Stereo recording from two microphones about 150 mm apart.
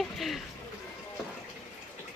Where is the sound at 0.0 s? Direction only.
Centre (ahead or behind).